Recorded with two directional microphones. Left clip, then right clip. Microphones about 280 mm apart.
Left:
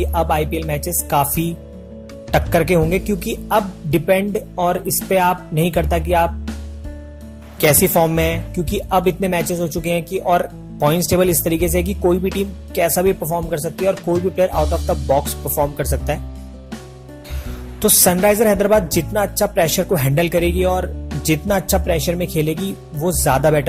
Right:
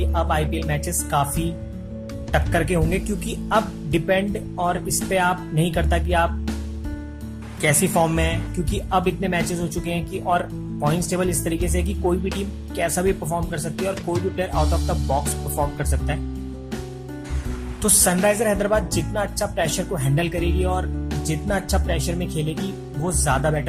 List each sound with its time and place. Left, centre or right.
0.1 s speech: centre
2.3 s speech: left
7.6 s speech: left
13.9 s speech: centre
14.3 s speech: centre
17.8 s speech: left